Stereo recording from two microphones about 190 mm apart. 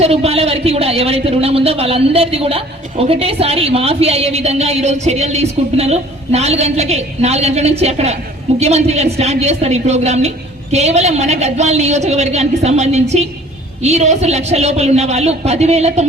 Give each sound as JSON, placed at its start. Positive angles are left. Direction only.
{"t": 0.0, "sound": "a man's voice", "side_deg": -35}